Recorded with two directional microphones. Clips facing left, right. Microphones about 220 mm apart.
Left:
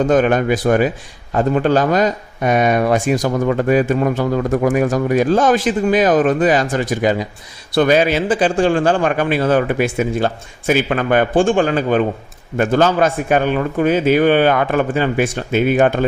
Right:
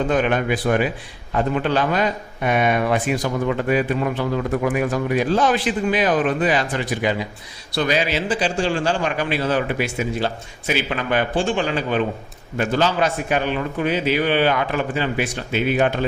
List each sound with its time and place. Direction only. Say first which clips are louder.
0.0 s a man's voice: left 6 dB; 45° left (ahead or behind)